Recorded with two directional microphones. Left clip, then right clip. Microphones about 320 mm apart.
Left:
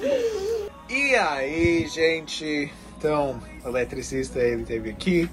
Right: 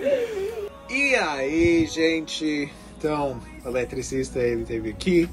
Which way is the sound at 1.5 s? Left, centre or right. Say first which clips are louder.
Right 5 dB; left.